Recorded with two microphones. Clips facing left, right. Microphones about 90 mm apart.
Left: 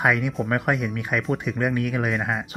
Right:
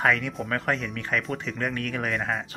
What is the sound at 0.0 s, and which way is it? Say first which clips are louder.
Speech: left 2 dB; 15° left (ahead or behind).